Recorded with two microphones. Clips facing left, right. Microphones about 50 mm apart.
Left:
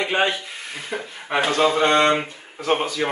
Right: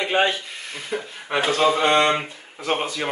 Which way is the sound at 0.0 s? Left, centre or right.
Centre.